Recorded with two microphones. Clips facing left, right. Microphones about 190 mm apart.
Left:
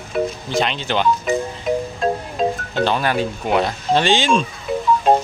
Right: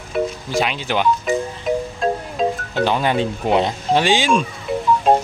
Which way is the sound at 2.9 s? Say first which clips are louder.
Right 2 dB; 20° right (ahead or behind).